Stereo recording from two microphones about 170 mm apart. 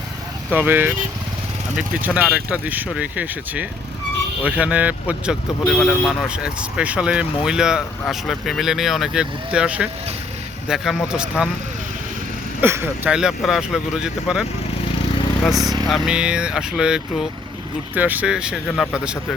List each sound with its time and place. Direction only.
0.5 s speech: 10° right (ahead or behind)
12.6 s speech: 15° right (ahead or behind)
15.5 s speech: 20° right (ahead or behind)
15.9 s speech: 5° right (ahead or behind)